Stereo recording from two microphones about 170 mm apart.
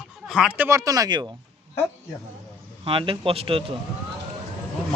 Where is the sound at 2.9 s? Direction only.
30° right (ahead or behind).